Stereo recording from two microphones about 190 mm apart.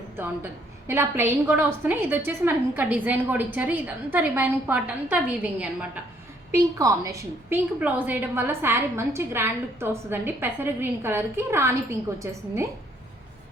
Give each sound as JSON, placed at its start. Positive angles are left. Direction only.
{"t": 0.9, "sound": "a woman's voice", "side_deg": -10}